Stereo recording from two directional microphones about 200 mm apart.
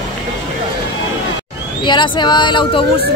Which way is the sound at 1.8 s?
25° left (ahead or behind).